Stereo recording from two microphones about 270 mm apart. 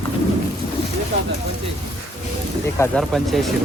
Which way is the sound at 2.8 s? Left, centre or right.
Centre.